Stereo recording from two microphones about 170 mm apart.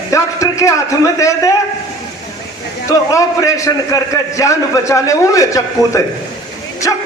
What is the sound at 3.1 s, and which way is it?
A man's voice, 20° left (ahead or behind).